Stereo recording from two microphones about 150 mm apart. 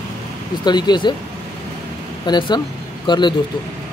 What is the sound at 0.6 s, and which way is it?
Speech, 30° left (ahead or behind).